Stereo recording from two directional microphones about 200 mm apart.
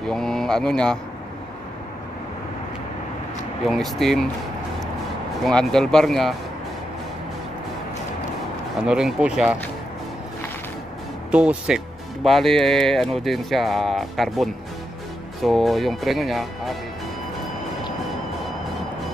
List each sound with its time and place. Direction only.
0.0 s speech: centre (ahead or behind)
3.6 s speech: centre (ahead or behind)
5.4 s speech: 5° left (ahead or behind)
8.7 s speech: 5° right (ahead or behind)
11.3 s speech: 5° right (ahead or behind)